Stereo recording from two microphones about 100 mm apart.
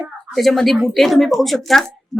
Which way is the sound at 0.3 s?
Centre (ahead or behind).